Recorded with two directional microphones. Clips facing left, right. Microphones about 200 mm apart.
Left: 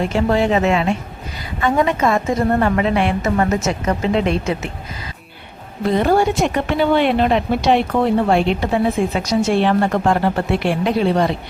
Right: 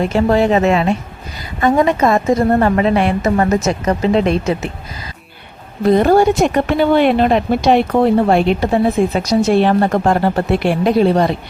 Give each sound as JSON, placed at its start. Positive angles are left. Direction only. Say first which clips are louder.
{"t": 0.3, "sound": "speech", "louder": "right 3 dB", "side_deg": -40}
{"t": 5.9, "sound": "speech", "louder": "right 5 dB", "side_deg": -45}